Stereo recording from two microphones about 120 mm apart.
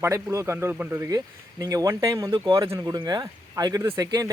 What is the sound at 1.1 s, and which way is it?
Speech, 30° right (ahead or behind).